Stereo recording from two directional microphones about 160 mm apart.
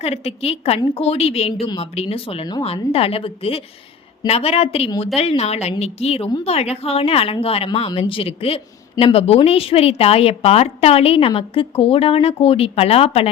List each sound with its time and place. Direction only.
0.0 s a woman's voice: 40° left (ahead or behind)